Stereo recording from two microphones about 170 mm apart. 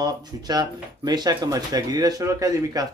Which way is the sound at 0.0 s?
25° right (ahead or behind).